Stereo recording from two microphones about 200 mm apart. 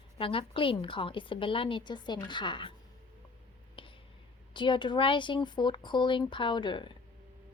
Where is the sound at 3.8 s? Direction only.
25° left (ahead or behind).